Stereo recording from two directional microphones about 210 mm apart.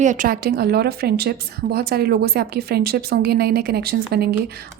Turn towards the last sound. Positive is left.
turn(degrees=-50)  # may be behind; listen again after turning